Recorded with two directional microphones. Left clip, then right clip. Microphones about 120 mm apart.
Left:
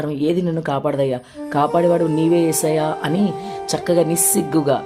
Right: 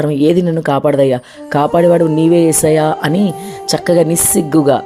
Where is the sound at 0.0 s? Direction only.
55° right (ahead or behind).